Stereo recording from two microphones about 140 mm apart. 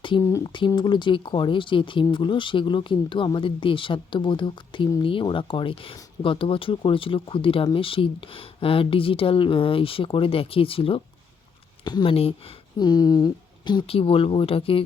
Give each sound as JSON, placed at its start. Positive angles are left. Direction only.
{"t": 0.2, "sound": "speech", "side_deg": 20}
{"t": 0.8, "sound": "speech", "side_deg": 35}
{"t": 11.9, "sound": "speech", "side_deg": 30}